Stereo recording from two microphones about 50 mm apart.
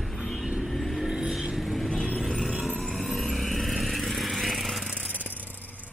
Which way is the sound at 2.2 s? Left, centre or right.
Centre.